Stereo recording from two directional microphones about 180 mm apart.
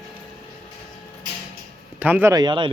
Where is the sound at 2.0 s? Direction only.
10° right (ahead or behind).